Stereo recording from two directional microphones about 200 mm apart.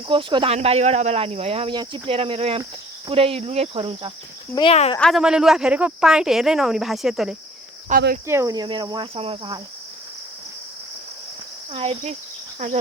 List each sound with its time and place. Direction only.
0.1 s speech: 25° right (ahead or behind)
4.5 s speech: 30° left (ahead or behind)
4.9 s speech: centre (ahead or behind)
7.9 s speech: 45° right (ahead or behind)
8.3 s speech: 15° right (ahead or behind)
11.7 s speech: 30° right (ahead or behind)
12.5 s insect: 35° right (ahead or behind)